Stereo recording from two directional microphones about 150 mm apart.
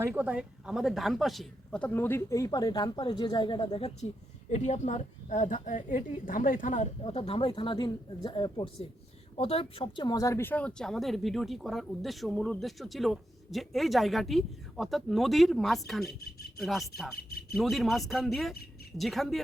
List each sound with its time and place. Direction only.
0.0 s speech: 10° right (ahead or behind); by 3.9 s 35° left (ahead or behind)
4.5 s a woman's voice: 50° left (ahead or behind)
7.0 s speech: 40° left (ahead or behind)
9.3 s speech: 40° left (ahead or behind); by 19.4 s centre (ahead or behind)